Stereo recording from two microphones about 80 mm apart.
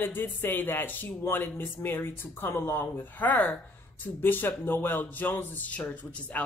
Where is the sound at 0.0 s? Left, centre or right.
Left.